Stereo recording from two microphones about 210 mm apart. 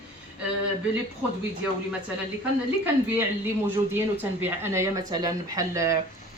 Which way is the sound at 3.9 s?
10° right (ahead or behind).